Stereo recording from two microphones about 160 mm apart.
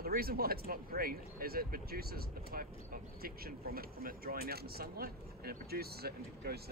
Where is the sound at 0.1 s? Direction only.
70° right (ahead or behind).